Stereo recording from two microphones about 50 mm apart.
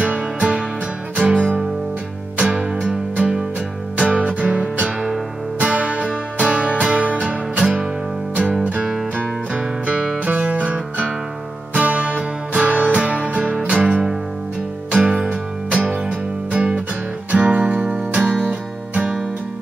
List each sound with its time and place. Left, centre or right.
0.4 s music: centre
9.8 s music: right
17.8 s music: centre